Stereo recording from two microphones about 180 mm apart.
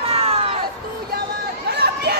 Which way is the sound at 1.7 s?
65° right (ahead or behind).